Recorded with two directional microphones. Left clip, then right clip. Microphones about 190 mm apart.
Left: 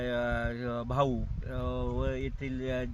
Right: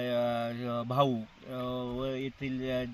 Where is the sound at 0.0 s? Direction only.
5° left (ahead or behind).